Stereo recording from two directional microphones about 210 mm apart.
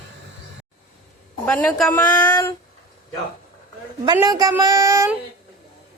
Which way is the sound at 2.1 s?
20° left (ahead or behind).